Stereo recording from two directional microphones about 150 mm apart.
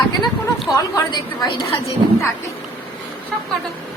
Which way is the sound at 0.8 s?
25° left (ahead or behind).